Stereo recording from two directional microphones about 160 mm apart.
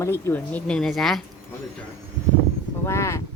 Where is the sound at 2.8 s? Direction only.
15° left (ahead or behind).